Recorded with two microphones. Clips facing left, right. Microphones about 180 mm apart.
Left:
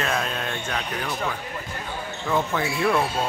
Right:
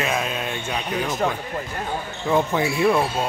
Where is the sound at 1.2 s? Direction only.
55° right (ahead or behind).